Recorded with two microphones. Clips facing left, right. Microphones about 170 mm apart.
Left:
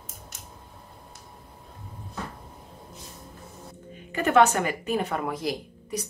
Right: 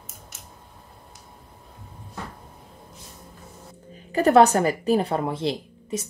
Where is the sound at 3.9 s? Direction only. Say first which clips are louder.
Right 4 dB; 35° right (ahead or behind).